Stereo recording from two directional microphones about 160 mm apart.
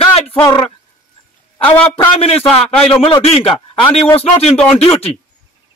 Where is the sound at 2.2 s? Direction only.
40° left (ahead or behind).